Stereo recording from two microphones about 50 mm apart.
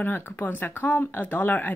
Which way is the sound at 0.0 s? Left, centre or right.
Left.